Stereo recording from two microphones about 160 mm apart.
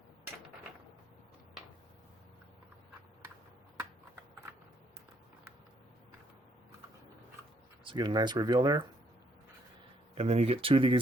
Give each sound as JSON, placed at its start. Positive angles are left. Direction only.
{"t": 7.9, "sound": "speech", "side_deg": -25}
{"t": 10.2, "sound": "speech", "side_deg": -40}